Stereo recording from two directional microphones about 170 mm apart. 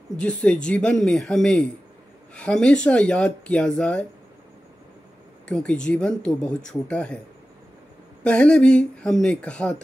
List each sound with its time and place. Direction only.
0.2 s speech: 5° left (ahead or behind)
5.5 s speech: 5° left (ahead or behind)
8.2 s speech: 5° left (ahead or behind)